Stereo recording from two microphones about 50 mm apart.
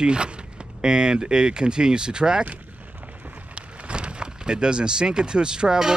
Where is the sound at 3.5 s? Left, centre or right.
Right.